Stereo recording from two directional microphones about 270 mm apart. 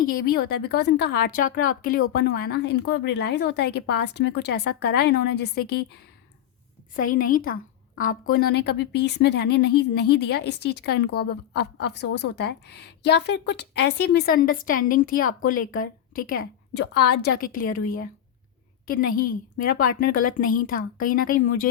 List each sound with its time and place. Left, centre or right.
0.0 s a woman's voice: left